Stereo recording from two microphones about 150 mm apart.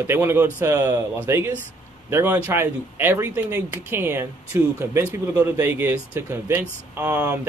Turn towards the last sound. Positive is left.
turn(degrees=-10)  # may be behind; listen again after turning